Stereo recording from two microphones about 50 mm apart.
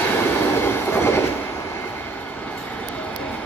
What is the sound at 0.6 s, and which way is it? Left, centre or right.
Train, left.